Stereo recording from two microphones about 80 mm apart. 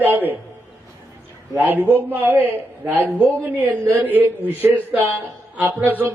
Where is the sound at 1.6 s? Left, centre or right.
Right.